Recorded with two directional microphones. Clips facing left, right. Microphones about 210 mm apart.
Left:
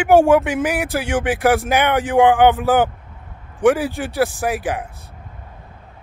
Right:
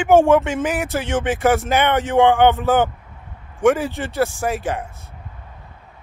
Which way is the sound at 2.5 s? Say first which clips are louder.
Left 1 dB; 15° left (ahead or behind).